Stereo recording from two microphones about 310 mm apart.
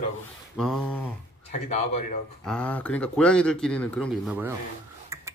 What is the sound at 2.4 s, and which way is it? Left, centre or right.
Speech, centre.